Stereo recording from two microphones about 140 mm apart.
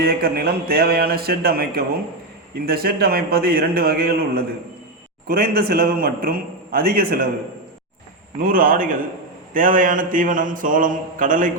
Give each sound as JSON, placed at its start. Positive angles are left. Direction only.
{"t": 0.0, "sound": "a man's voice", "side_deg": -90}
{"t": 8.4, "sound": "a man's voice", "side_deg": -90}
{"t": 9.5, "sound": "mantra", "side_deg": -70}